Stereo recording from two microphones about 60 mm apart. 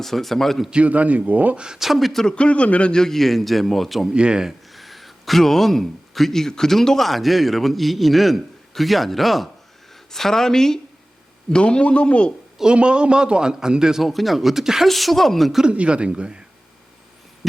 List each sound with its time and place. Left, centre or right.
0.0 s speech: centre
0.7 s speech: right
1.6 s speech: centre
2.2 s speech: centre
4.1 s a man's voice: centre
4.7 s a man's voice: centre
12.5 s a man's voice: centre
14.0 s speech: centre
15.6 s a man's voice: centre